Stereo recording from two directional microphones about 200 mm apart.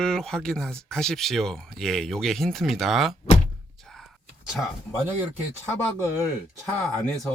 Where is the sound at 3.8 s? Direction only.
5° left (ahead or behind).